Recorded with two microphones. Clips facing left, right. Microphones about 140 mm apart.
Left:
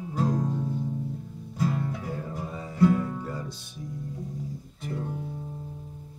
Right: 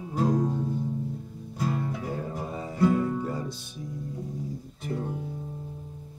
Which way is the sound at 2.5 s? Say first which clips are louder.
Right 3 dB; 20° right (ahead or behind).